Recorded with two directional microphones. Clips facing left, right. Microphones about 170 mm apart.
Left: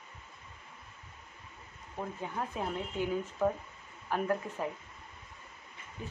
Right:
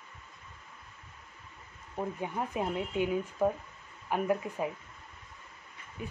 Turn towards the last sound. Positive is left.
turn(degrees=-10)  # may be behind; listen again after turning